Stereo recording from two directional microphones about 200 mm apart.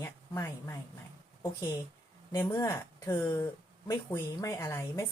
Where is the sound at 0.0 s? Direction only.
10° left (ahead or behind).